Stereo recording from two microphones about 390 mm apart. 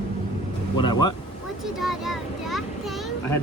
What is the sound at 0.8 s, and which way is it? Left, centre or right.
Speech, centre.